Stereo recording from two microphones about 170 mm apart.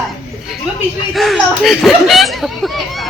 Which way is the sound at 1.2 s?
Centre (ahead or behind).